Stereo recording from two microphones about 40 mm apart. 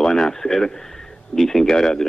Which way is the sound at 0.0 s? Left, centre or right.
Centre.